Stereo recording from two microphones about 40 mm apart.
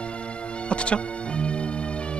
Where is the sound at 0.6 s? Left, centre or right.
Left.